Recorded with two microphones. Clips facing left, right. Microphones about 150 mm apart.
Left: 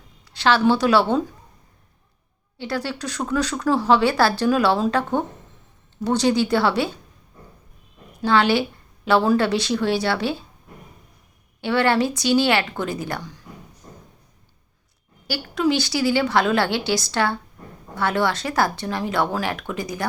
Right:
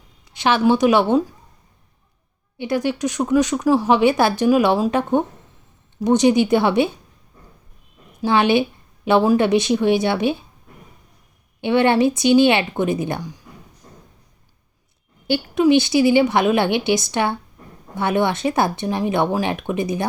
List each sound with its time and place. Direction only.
0.3 s speech: 20° right (ahead or behind)
2.6 s speech: 20° right (ahead or behind)
8.2 s speech: 20° right (ahead or behind)
11.6 s speech: 20° right (ahead or behind)
15.3 s speech: 20° right (ahead or behind)